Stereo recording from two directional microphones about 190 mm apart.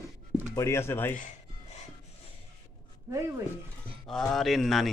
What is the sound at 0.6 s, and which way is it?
Speech, 15° left (ahead or behind).